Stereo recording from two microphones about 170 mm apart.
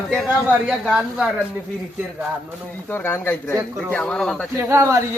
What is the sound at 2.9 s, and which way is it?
Speech, 15° left (ahead or behind).